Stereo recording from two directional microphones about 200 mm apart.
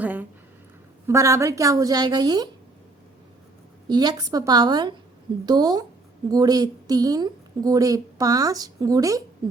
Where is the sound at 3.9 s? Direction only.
20° right (ahead or behind).